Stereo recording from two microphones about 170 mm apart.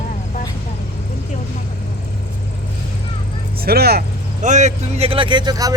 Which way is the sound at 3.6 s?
65° right (ahead or behind).